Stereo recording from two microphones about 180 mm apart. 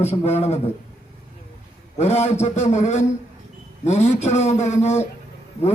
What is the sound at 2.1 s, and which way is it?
A man's voice, 40° left (ahead or behind).